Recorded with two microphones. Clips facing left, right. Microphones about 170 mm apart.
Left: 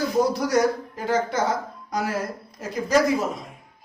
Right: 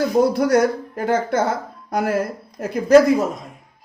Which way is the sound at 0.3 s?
55° right (ahead or behind).